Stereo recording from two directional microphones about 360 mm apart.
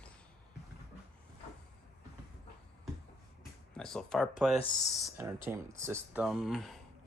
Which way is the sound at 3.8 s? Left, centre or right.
Centre.